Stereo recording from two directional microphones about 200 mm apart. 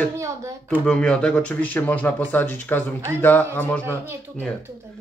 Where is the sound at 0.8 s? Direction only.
5° left (ahead or behind).